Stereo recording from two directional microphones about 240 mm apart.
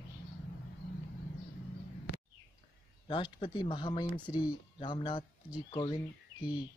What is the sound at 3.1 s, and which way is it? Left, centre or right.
Speech, centre.